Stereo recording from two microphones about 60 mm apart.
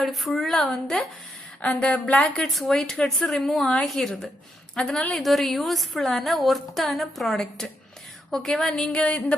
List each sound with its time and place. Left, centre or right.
0.0 s a woman's voice: centre
1.6 s a woman's voice: centre
2.4 s a woman's voice: centre
4.7 s a woman's voice: centre
5.1 s a woman's voice: centre